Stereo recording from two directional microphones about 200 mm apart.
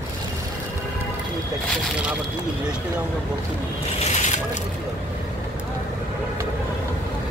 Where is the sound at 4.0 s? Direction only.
35° left (ahead or behind).